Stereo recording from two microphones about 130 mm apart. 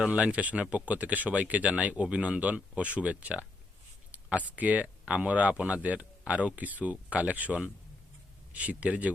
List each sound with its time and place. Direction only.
0.0 s speech: 10° right (ahead or behind)